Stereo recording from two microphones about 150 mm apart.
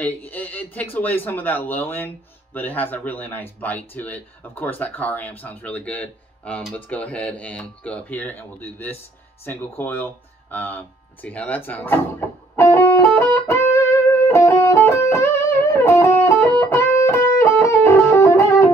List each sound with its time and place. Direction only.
0.0 s speech: 10° left (ahead or behind)
12.5 s music: 15° left (ahead or behind)